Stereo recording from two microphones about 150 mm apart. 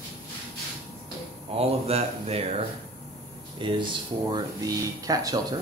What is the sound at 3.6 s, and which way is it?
Speech, 35° right (ahead or behind).